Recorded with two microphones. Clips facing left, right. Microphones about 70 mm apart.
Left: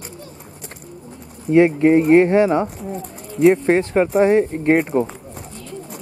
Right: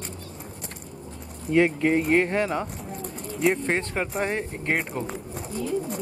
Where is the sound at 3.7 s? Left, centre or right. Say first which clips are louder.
Left 10 dB; centre.